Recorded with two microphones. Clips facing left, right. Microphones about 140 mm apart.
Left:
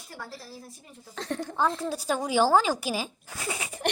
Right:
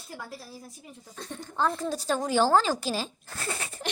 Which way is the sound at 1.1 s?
90° left.